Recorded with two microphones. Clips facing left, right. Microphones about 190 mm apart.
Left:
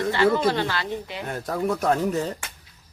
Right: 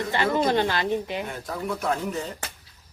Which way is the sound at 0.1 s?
15° right (ahead or behind).